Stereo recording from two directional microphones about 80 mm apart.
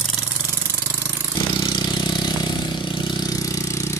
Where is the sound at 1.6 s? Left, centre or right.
Left.